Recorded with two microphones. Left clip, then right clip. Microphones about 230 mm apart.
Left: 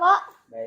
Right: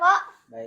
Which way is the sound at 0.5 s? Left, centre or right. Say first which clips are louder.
Left 4 dB; right.